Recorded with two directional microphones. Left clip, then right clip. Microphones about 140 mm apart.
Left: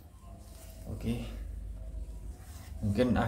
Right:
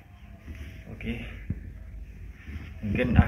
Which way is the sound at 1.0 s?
15° left (ahead or behind).